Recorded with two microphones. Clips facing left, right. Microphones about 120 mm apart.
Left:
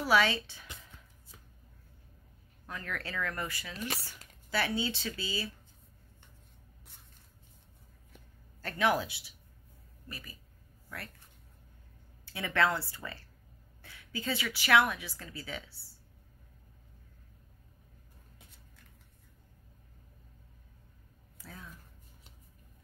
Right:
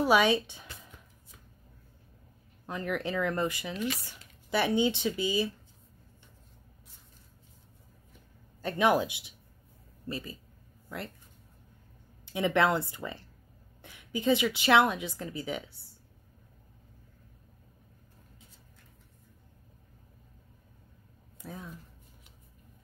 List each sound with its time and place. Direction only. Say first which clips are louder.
0.0 s speech: right 4 dB; 15° right (ahead or behind)
2.6 s a woman's voice: right 8 dB; 20° right (ahead or behind)
3.7 s speech: right 5 dB; 40° left (ahead or behind)
4.5 s a woman's voice: right 6 dB; 20° right (ahead or behind)
8.5 s a woman's voice: right 4 dB; 20° right (ahead or behind)
12.3 s a woman's voice: right 4 dB; 20° right (ahead or behind)
21.4 s a sound: right 7 dB; 20° right (ahead or behind)